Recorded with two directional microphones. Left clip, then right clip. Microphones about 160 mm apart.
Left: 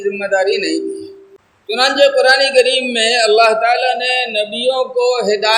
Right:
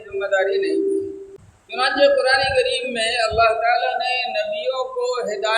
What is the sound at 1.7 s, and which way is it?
A man's voice, 55° left (ahead or behind).